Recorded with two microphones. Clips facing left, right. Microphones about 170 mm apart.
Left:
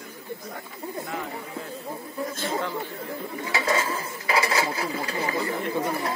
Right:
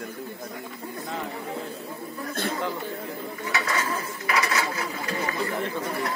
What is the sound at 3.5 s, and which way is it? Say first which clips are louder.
Speech: left 3 dB; 25° left (ahead or behind).